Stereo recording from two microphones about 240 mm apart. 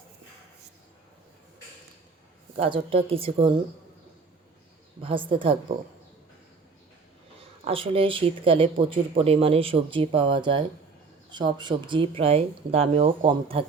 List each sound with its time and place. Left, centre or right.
2.6 s speech: right
5.0 s speech: right
7.7 s speech: right